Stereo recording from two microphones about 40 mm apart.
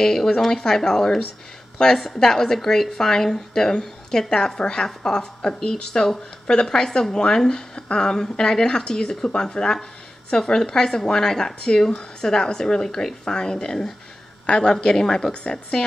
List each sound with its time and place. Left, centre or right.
0.0 s a woman's voice: centre